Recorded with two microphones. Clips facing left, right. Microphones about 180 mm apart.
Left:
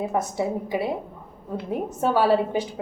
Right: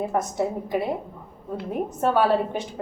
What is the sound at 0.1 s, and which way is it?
Speech, 5° left (ahead or behind).